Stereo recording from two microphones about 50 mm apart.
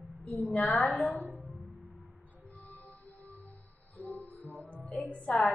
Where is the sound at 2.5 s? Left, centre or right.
Left.